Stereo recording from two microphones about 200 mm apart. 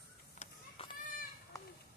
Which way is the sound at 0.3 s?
30° left (ahead or behind).